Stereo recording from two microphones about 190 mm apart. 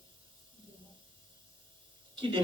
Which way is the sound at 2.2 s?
25° right (ahead or behind).